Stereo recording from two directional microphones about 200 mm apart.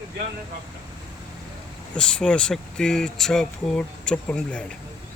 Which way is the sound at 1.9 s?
5° left (ahead or behind).